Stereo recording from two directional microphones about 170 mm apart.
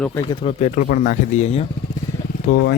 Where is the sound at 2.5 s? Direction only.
75° left (ahead or behind).